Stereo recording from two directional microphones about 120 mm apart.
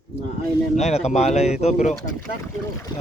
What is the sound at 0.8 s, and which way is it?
Speech, 65° left (ahead or behind).